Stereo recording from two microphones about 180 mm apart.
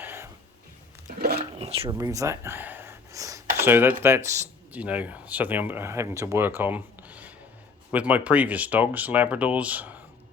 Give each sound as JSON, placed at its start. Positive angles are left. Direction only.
{"t": 0.0, "sound": "music", "side_deg": -10}
{"t": 1.4, "sound": "a sound", "side_deg": -35}
{"t": 2.0, "sound": "speech", "side_deg": -20}